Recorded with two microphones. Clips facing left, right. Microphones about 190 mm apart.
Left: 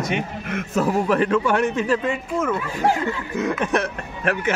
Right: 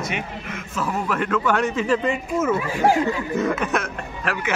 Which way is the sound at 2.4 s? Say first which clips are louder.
Right 4 dB; 5° right (ahead or behind).